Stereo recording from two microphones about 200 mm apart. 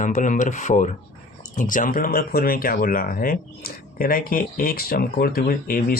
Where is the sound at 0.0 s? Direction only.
40° left (ahead or behind).